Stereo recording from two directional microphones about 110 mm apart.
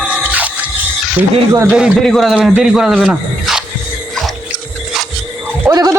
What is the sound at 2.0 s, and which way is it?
A man's voice, 5° left (ahead or behind).